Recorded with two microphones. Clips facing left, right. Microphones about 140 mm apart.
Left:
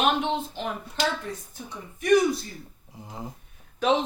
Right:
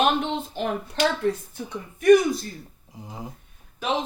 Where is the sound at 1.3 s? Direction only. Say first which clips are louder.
Right 11 dB; 85° right.